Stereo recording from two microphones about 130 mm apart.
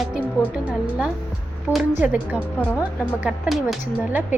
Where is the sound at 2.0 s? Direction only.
10° right (ahead or behind).